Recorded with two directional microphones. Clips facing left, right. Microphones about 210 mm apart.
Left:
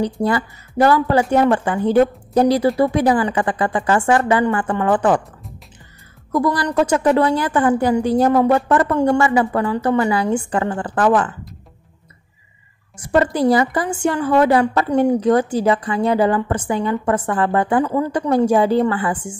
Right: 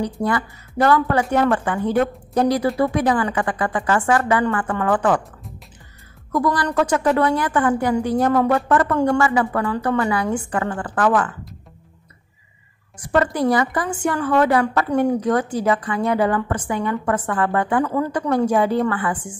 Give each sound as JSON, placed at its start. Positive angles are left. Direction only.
{"t": 0.0, "sound": "a woman's voice", "side_deg": 30}
{"t": 6.3, "sound": "a woman's voice", "side_deg": 25}
{"t": 12.9, "sound": "a woman's voice", "side_deg": 25}
{"t": 17.8, "sound": "a woman's voice", "side_deg": 20}
{"t": 18.3, "sound": "a woman's voice", "side_deg": 30}